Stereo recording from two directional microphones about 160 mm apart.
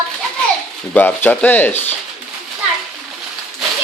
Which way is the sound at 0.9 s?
10° left (ahead or behind).